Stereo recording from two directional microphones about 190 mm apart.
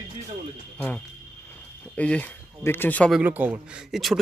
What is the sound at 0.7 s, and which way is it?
Speech, 10° left (ahead or behind).